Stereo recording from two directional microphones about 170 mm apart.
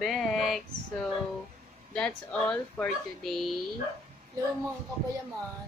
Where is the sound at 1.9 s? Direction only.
5° left (ahead or behind).